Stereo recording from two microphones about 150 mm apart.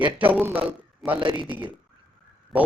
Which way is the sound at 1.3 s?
35° right (ahead or behind).